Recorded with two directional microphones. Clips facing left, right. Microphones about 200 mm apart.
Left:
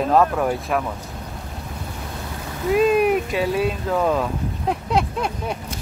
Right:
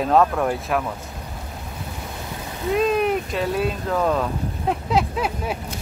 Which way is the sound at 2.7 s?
5° left (ahead or behind).